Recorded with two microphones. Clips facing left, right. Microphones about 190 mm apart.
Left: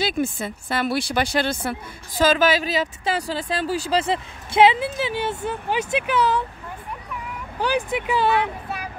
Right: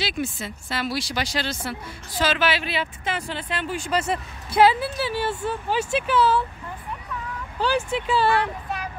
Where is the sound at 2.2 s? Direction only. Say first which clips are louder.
Left 5 dB; 45° left (ahead or behind); by 6.4 s 15° left (ahead or behind).